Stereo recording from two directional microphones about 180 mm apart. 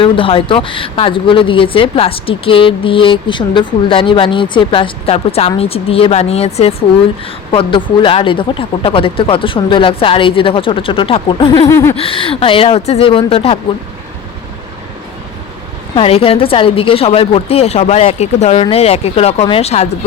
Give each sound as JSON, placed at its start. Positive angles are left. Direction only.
{"t": 0.0, "sound": "a woman's voice", "side_deg": 30}
{"t": 11.7, "sound": "a sound", "side_deg": 15}
{"t": 11.9, "sound": "a woman's voice", "side_deg": 30}
{"t": 16.0, "sound": "a woman's voice", "side_deg": 30}